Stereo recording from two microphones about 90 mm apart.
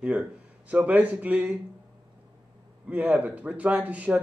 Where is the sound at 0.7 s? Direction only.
15° right (ahead or behind).